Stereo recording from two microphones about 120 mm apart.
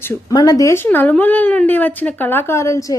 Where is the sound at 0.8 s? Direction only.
15° left (ahead or behind).